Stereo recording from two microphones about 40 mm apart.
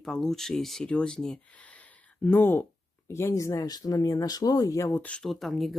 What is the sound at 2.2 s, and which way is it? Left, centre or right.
Speech, left.